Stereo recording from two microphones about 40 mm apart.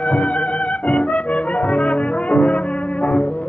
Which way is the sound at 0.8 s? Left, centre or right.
Left.